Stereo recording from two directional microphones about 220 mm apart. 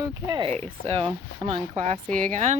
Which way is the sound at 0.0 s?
20° right (ahead or behind).